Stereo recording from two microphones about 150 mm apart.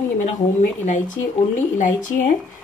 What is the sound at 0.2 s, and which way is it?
Speech, 55° left (ahead or behind).